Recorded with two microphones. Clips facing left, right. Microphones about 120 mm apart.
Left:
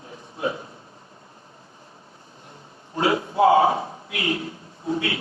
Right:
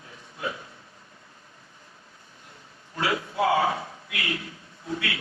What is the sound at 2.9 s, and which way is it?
A man's voice, 30° left (ahead or behind).